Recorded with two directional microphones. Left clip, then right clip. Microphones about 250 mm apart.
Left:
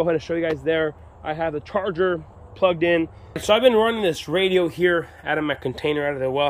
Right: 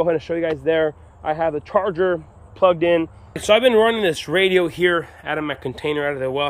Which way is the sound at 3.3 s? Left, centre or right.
Centre.